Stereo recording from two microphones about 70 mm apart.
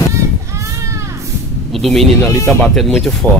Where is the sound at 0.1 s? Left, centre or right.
Right.